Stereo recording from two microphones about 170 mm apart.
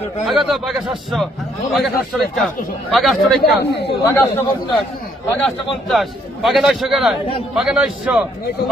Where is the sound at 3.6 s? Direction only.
80° left.